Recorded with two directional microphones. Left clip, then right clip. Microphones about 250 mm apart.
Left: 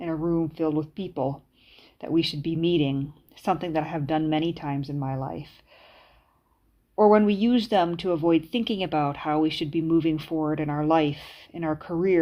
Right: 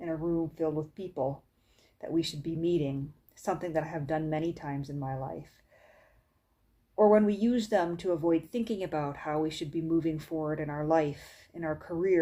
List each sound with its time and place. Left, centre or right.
0.0 s speech: left
6.9 s speech: left